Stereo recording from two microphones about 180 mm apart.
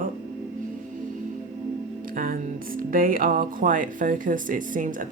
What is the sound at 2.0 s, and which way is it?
Speech, 50° right (ahead or behind).